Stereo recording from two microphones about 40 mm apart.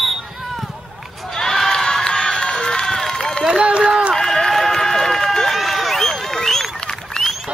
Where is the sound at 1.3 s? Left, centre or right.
Centre.